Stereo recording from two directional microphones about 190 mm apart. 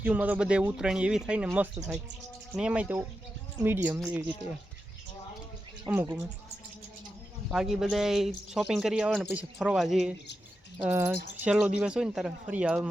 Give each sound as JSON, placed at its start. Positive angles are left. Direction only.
{"t": 0.0, "sound": "speech", "side_deg": -10}
{"t": 5.9, "sound": "speech", "side_deg": -10}
{"t": 7.5, "sound": "speech", "side_deg": 0}